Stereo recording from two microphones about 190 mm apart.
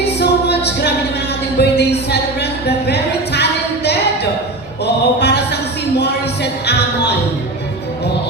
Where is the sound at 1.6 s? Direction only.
60° left (ahead or behind).